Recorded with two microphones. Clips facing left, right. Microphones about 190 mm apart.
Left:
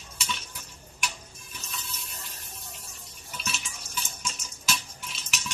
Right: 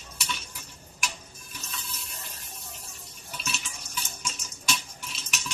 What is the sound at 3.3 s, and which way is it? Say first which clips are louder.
Water: even; centre (ahead or behind).